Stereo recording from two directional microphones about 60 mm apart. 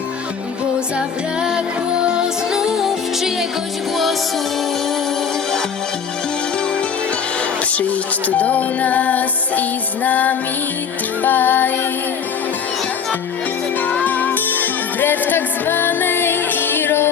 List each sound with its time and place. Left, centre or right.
0.9 s music: centre
7.7 s music: left
13.8 s music: left